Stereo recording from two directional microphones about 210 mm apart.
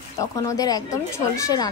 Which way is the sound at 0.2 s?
15° left (ahead or behind).